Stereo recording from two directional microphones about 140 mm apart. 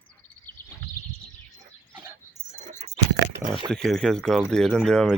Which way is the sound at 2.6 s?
55° right (ahead or behind).